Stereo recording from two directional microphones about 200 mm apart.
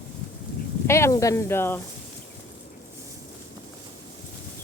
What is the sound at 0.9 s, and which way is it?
Speech, 15° left (ahead or behind).